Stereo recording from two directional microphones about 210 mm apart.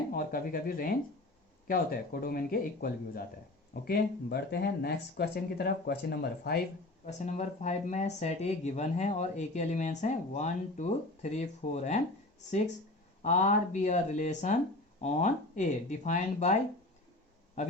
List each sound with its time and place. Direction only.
0.1 s speech: 45° left (ahead or behind)
7.0 s speech: 35° left (ahead or behind)
13.2 s speech: 35° left (ahead or behind)